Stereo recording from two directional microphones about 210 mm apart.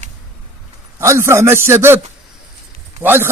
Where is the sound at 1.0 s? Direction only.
15° right (ahead or behind).